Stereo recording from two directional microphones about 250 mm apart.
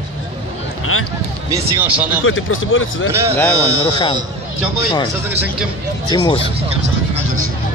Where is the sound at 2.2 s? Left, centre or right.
Left.